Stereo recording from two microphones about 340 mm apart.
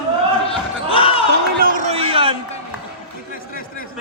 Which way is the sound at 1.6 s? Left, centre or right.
Right.